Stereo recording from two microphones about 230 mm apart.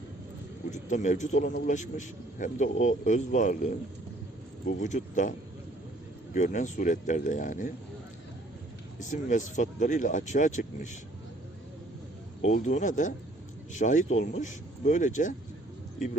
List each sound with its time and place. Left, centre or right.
0.7 s a man's voice: left
6.3 s a man's voice: left
9.0 s a man's voice: left
12.4 s a man's voice: left